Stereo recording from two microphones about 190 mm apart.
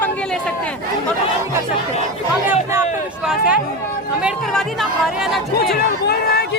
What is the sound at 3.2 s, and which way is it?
Chatter, 5° right (ahead or behind).